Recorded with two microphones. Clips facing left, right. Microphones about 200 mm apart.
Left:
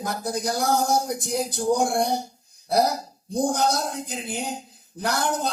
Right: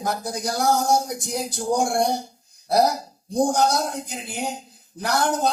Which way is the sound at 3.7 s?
60° right (ahead or behind).